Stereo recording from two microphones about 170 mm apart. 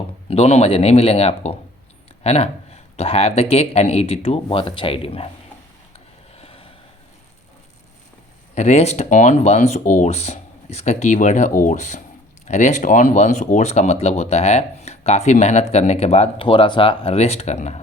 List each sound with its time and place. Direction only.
0.3 s speech: 35° left (ahead or behind)
6.3 s vehicle: 35° left (ahead or behind)
8.5 s speech: 40° left (ahead or behind)